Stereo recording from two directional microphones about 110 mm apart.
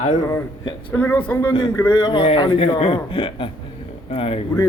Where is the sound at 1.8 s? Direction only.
30° left (ahead or behind).